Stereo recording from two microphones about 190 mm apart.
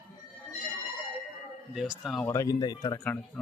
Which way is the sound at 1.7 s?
5° right (ahead or behind).